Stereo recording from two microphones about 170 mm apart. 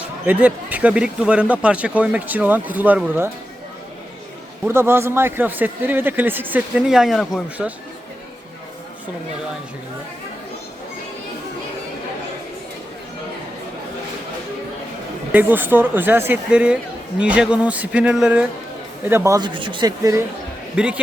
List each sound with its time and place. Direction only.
0.3 s a man's voice: 10° right (ahead or behind)
4.6 s a man's voice: 15° right (ahead or behind); by 7.7 s centre (ahead or behind)
15.3 s a man's voice: 10° right (ahead or behind)
19.5 s speech: 30° right (ahead or behind)
20.7 s a man's voice: 5° right (ahead or behind)